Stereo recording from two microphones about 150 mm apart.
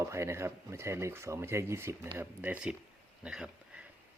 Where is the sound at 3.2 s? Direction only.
5° right (ahead or behind).